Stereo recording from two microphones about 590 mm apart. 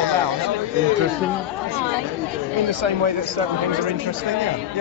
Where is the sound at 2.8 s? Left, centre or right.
Right.